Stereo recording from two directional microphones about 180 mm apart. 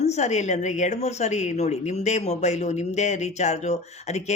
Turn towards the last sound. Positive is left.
turn(degrees=40)  # may be behind; listen again after turning